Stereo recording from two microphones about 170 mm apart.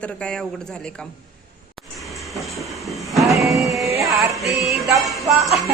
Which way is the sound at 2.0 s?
Centre (ahead or behind).